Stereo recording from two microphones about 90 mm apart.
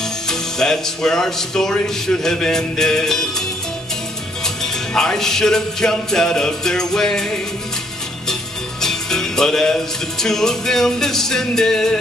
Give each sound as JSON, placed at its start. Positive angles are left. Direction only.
{"t": 0.3, "sound": "speech", "side_deg": 5}
{"t": 2.2, "sound": "music", "side_deg": 5}
{"t": 4.9, "sound": "music", "side_deg": 5}
{"t": 8.8, "sound": "music", "side_deg": 5}